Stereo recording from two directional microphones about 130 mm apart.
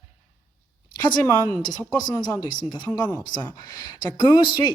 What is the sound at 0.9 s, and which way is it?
Speech, 35° left (ahead or behind).